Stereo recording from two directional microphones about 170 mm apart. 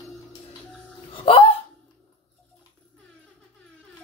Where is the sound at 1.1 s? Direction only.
30° left (ahead or behind).